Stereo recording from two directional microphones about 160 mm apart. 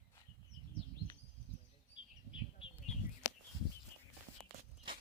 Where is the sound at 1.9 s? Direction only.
30° left (ahead or behind).